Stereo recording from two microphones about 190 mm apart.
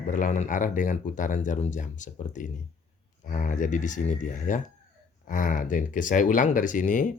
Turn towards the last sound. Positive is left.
turn(degrees=45)  # may be behind; listen again after turning